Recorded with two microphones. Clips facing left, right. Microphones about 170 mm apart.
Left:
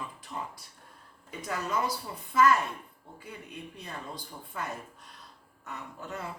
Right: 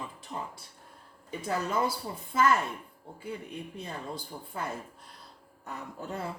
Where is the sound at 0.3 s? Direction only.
30° right (ahead or behind).